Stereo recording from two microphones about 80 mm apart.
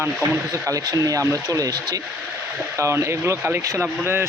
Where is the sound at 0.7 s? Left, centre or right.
Right.